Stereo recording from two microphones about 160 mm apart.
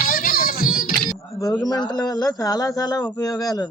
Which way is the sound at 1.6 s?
25° left (ahead or behind).